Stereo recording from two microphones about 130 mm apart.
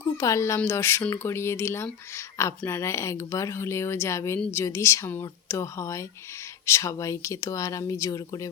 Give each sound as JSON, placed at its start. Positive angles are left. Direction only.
{"t": 0.2, "sound": "speech", "side_deg": 20}